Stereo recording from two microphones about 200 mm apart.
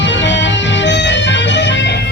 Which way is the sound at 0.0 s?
65° left (ahead or behind).